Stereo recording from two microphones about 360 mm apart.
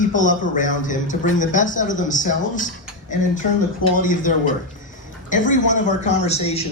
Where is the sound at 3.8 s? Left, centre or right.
Left.